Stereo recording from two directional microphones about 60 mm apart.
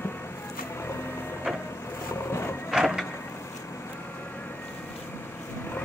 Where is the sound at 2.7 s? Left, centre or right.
Centre.